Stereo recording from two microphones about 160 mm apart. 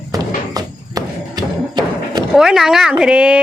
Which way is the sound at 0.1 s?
20° right (ahead or behind).